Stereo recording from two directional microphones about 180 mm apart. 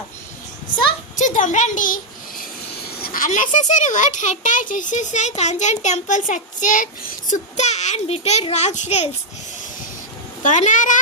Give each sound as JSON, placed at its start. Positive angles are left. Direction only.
{"t": 1.1, "sound": "a child's voice", "side_deg": 45}
{"t": 3.0, "sound": "a child's voice", "side_deg": 50}
{"t": 10.4, "sound": "a child's voice", "side_deg": 45}